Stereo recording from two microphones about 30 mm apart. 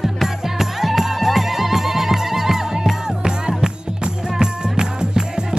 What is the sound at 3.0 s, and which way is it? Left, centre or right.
Music, right.